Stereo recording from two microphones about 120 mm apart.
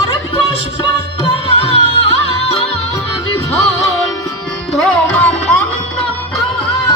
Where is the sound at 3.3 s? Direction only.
25° left (ahead or behind).